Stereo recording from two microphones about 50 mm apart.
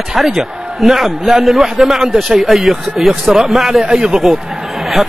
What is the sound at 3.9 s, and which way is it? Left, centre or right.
Speech, centre.